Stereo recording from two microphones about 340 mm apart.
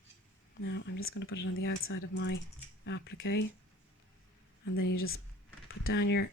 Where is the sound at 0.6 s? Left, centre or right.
Left.